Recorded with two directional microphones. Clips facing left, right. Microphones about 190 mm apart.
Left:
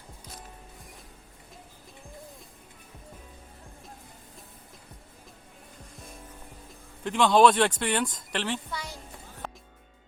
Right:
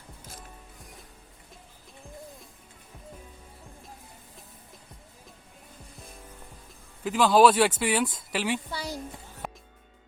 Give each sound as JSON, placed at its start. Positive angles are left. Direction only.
{"t": 7.0, "sound": "speech", "side_deg": -5}
{"t": 8.7, "sound": "a woman's voice", "side_deg": -35}
{"t": 9.4, "sound": "music", "side_deg": -10}